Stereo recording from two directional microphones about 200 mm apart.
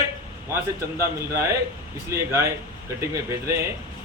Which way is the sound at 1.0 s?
15° right (ahead or behind).